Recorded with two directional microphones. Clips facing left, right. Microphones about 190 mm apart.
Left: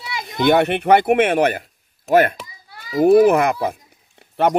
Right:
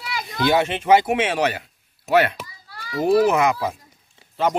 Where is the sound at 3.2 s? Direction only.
55° left (ahead or behind).